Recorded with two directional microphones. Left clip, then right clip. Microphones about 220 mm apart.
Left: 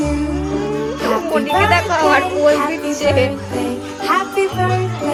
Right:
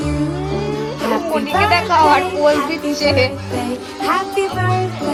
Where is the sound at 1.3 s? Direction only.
15° left (ahead or behind).